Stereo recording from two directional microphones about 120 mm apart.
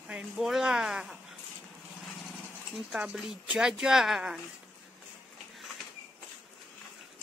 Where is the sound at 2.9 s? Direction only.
5° right (ahead or behind).